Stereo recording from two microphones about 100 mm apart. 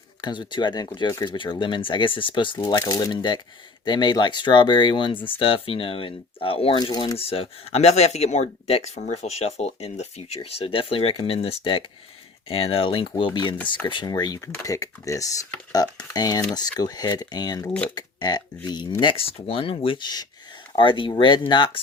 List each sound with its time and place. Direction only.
0.2 s speech: 50° left (ahead or behind)
5.2 s speech: 65° left (ahead or behind)
6.9 s speech: 45° left (ahead or behind)
7.2 s speech: 75° left (ahead or behind); by 19.1 s 45° left (ahead or behind)
19.1 s speech: 70° left (ahead or behind); by 21.8 s 50° left (ahead or behind)